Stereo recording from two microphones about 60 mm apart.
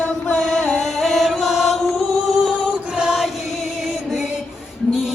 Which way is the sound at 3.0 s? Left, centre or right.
Centre.